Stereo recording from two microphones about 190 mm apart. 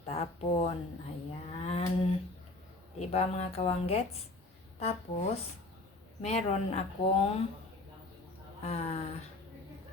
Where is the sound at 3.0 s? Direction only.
35° left (ahead or behind).